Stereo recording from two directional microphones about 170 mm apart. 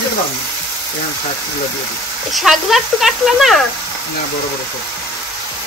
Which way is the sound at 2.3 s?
Centre (ahead or behind).